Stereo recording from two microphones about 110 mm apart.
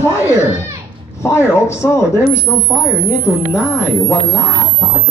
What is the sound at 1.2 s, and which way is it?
Speech, 25° left (ahead or behind).